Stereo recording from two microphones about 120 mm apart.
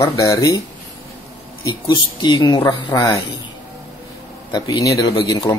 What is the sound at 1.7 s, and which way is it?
Speech, 35° left (ahead or behind).